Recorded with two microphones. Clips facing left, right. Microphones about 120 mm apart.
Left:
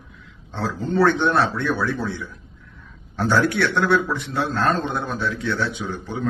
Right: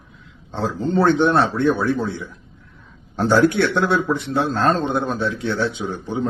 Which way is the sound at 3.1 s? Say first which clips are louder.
Right 4 dB; 25° right (ahead or behind).